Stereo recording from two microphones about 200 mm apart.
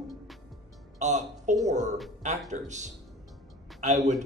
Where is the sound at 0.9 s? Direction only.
35° right (ahead or behind).